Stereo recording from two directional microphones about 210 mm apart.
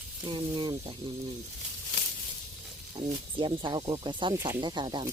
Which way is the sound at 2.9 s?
20° right (ahead or behind).